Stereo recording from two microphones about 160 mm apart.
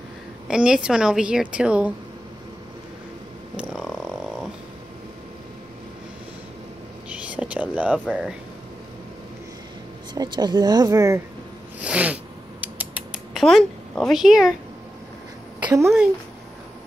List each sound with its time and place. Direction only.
0.5 s speech: 5° right (ahead or behind)
3.5 s frog: 5° right (ahead or behind)
7.2 s whispering: 10° right (ahead or behind)
8.1 s speech: 5° right (ahead or behind)
10.1 s speech: 25° right (ahead or behind)
11.8 s mechanisms: 10° right (ahead or behind)
15.6 s a sound: 15° right (ahead or behind)